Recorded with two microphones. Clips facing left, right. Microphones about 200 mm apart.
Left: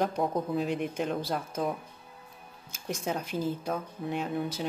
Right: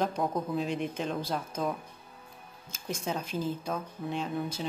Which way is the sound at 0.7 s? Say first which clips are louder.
Left 2 dB; 10° left (ahead or behind).